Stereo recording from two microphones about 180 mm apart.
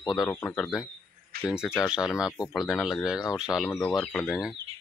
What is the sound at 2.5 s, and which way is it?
Speech, centre (ahead or behind).